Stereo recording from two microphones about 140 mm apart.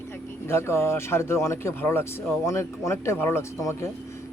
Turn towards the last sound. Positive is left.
turn(degrees=20)  # may be behind; listen again after turning